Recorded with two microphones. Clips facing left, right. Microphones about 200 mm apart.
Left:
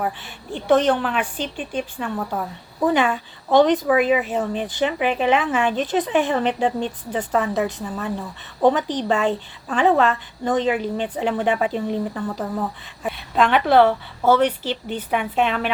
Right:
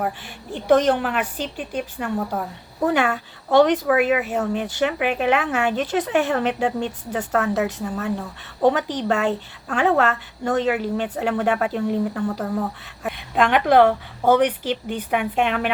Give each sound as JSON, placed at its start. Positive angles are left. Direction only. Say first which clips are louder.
{"t": 0.0, "sound": "speech", "louder": "even", "side_deg": -10}
{"t": 3.5, "sound": "speech", "louder": "even", "side_deg": -10}